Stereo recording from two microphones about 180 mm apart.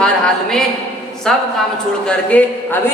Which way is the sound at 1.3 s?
Centre (ahead or behind).